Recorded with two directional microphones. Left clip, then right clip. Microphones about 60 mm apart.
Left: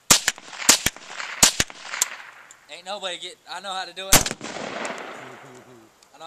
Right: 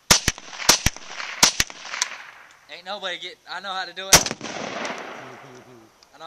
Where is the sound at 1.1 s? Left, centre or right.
Centre.